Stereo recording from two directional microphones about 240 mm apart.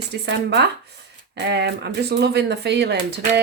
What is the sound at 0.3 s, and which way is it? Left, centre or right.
Speech, right.